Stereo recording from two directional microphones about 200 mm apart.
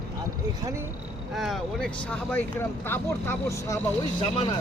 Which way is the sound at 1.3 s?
Centre (ahead or behind).